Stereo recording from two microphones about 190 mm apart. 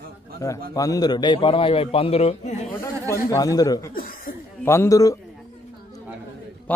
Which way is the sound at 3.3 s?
20° left (ahead or behind).